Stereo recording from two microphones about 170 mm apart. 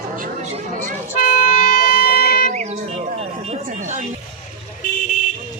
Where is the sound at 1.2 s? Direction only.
60° left (ahead or behind).